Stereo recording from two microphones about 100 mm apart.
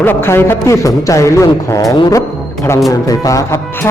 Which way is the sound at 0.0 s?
25° left (ahead or behind).